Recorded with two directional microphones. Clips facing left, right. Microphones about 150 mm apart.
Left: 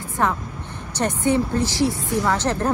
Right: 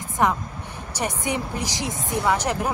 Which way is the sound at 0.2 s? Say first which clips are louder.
Right 1 dB; 15° right (ahead or behind).